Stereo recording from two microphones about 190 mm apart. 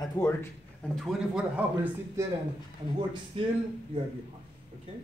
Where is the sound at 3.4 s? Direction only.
30° right (ahead or behind).